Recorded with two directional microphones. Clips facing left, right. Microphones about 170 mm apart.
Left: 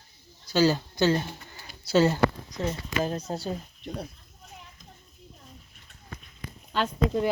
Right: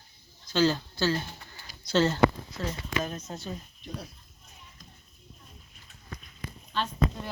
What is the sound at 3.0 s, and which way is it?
Speech, 35° left (ahead or behind).